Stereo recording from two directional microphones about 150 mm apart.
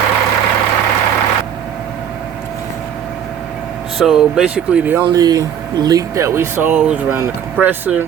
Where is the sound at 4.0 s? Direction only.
5° right (ahead or behind).